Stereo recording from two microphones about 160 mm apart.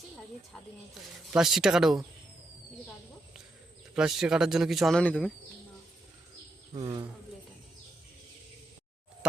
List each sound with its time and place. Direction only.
1.3 s a man's voice: 5° right (ahead or behind)
3.9 s a man's voice: 5° right (ahead or behind)
6.7 s speech: 35° right (ahead or behind)